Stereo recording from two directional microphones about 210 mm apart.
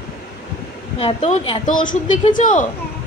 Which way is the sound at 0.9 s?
30° left (ahead or behind).